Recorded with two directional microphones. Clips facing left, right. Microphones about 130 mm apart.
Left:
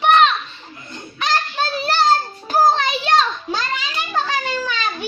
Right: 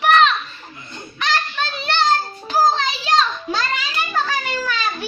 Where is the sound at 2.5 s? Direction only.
55° left (ahead or behind).